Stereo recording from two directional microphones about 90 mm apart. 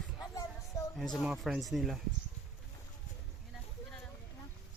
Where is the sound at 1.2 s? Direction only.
5° right (ahead or behind).